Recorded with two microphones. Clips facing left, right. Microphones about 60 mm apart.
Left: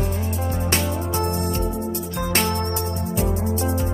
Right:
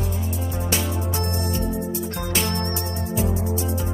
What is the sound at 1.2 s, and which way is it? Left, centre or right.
Music, left.